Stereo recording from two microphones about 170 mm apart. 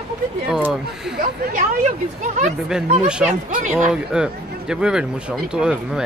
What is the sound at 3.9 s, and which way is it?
Speech, 5° right (ahead or behind).